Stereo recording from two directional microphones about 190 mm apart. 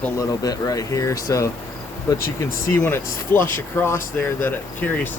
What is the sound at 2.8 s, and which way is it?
Speech, 10° left (ahead or behind).